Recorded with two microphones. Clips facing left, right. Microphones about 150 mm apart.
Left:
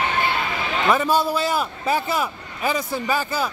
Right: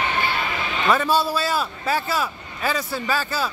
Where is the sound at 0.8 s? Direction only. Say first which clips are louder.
Left 1 dB; 10° left (ahead or behind).